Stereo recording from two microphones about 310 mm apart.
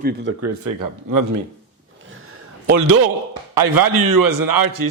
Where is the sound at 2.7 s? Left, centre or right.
Right.